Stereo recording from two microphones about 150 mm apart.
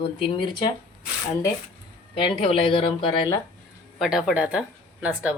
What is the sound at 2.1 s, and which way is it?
Speech, 40° left (ahead or behind).